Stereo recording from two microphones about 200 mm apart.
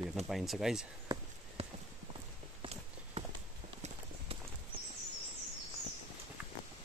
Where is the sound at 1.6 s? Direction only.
30° right (ahead or behind).